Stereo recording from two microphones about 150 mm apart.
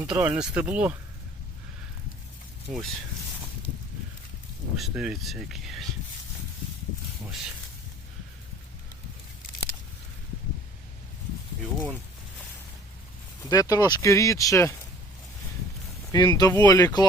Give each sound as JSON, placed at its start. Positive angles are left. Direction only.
{"t": 0.0, "sound": "speech", "side_deg": -10}
{"t": 2.6, "sound": "speech", "side_deg": 0}
{"t": 4.8, "sound": "speech", "side_deg": -5}
{"t": 13.4, "sound": "speech", "side_deg": 25}
{"t": 16.1, "sound": "speech", "side_deg": 25}